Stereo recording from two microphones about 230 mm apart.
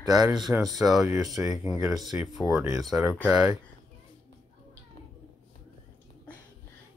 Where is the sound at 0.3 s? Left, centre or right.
Centre.